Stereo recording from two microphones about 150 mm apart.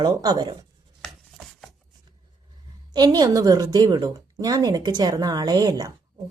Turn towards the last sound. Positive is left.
turn(degrees=-25)  # may be behind; listen again after turning